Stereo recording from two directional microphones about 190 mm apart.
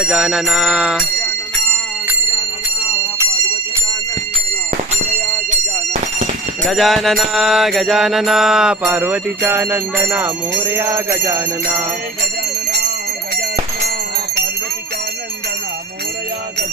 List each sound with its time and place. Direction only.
0.0 s mantra: centre (ahead or behind)
5.5 s a sound: 40° right (ahead or behind)
6.7 s mantra: centre (ahead or behind); by 11.4 s 15° right (ahead or behind)